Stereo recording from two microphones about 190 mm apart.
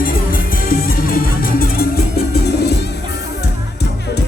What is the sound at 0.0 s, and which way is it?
Music, 50° left (ahead or behind).